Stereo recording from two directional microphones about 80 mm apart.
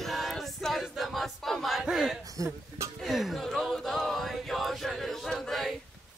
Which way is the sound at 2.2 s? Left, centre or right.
Right.